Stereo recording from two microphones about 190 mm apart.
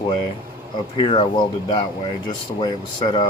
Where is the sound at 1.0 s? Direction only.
30° left (ahead or behind).